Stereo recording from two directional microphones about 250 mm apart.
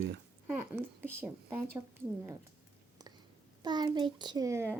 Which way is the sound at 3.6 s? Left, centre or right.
Centre.